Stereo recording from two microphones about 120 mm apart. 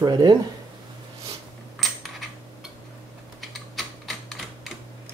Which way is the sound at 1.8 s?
Centre (ahead or behind).